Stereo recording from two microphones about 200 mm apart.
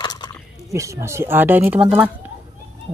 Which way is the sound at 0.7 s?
15° right (ahead or behind).